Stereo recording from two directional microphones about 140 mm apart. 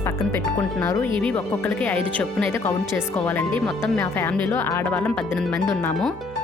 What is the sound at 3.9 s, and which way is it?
Speech, 20° left (ahead or behind).